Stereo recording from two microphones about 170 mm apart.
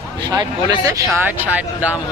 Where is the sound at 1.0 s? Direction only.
10° right (ahead or behind).